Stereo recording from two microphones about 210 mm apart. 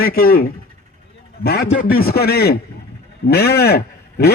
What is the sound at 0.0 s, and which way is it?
A man's voice, 45° left (ahead or behind).